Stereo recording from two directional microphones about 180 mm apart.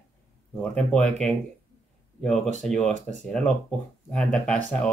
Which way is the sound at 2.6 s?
5° left (ahead or behind).